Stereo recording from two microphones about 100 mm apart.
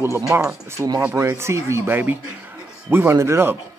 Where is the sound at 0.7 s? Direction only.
35° right (ahead or behind).